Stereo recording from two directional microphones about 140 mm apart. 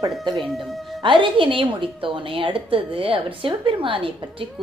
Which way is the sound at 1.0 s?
35° right (ahead or behind).